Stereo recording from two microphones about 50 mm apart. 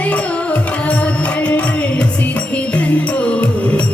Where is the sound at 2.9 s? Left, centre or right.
Left.